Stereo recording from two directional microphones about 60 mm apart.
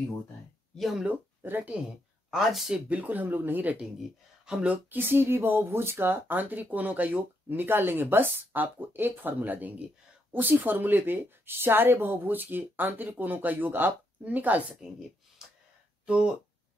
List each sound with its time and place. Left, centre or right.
0.7 s speech: centre
1.4 s speech: right
2.3 s speech: centre
2.7 s speech: right
4.5 s speech: centre
4.9 s speech: right
14.7 s a woman's voice: centre